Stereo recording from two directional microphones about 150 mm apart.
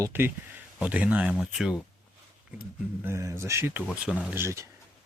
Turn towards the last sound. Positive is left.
turn(degrees=-15)  # may be behind; listen again after turning